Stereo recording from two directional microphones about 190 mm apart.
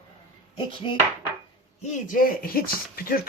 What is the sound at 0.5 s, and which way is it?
Speech, 25° left (ahead or behind).